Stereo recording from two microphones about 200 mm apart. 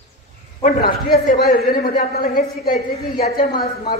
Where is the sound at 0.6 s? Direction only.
50° left (ahead or behind).